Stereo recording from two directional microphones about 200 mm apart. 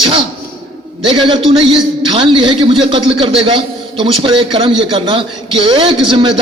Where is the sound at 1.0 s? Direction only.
25° right (ahead or behind).